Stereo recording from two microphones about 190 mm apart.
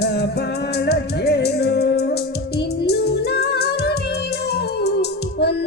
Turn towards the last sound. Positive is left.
turn(degrees=60)  # may be behind; listen again after turning